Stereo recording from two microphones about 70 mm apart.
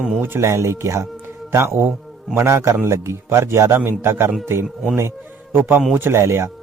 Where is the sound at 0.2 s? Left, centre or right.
Right.